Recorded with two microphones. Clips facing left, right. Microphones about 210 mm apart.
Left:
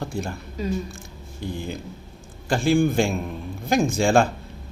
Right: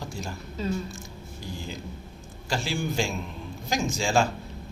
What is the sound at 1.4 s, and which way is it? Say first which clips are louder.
A man's voice: left 7 dB; 55° left (ahead or behind).